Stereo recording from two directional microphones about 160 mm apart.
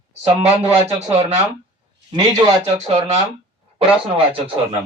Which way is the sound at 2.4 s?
30° right (ahead or behind).